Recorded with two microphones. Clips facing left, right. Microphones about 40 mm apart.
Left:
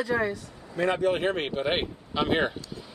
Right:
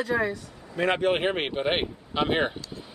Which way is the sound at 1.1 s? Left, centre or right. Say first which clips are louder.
Right 1 dB; right.